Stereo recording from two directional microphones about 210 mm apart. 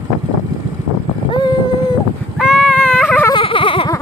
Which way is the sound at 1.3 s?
20° left (ahead or behind).